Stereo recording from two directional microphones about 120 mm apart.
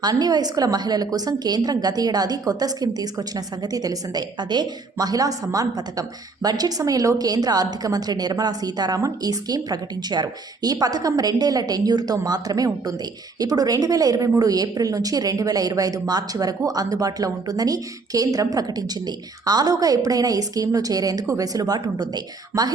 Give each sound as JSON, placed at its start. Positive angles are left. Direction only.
{"t": 0.0, "sound": "a woman's voice", "side_deg": -35}